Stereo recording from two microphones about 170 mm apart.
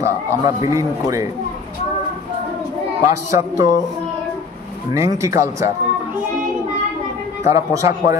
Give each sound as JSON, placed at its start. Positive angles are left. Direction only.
{"t": 0.0, "sound": "a man's voice", "side_deg": -15}
{"t": 3.1, "sound": "a man's voice", "side_deg": -20}
{"t": 4.9, "sound": "speech", "side_deg": -20}
{"t": 7.4, "sound": "a man's voice", "side_deg": -20}